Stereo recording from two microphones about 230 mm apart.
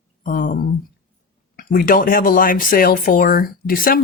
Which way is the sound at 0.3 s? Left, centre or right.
Left.